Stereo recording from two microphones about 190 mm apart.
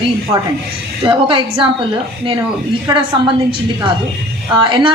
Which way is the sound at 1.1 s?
25° right (ahead or behind).